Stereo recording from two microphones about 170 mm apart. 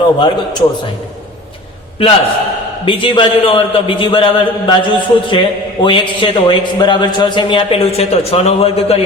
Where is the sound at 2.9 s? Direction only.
30° left (ahead or behind).